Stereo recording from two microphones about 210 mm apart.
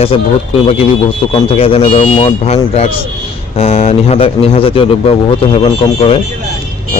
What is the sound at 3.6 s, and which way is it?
Speech, 30° left (ahead or behind).